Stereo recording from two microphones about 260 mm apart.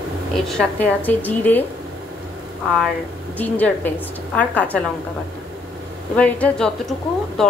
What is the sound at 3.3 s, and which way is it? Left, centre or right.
Speech, centre.